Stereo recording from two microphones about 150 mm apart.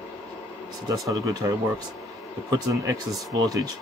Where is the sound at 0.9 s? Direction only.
25° right (ahead or behind).